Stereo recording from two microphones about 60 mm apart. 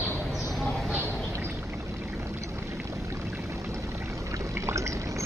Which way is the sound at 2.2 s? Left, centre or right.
Right.